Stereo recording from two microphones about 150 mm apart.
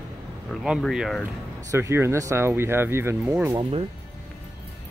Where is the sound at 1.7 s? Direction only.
15° right (ahead or behind).